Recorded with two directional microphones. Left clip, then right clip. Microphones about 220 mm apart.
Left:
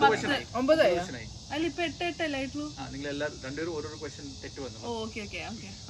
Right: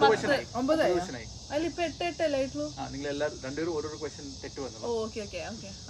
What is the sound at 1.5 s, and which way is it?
Speech, 25° right (ahead or behind).